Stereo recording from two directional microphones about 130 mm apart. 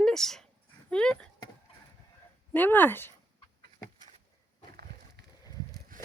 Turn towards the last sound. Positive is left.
turn(degrees=-90)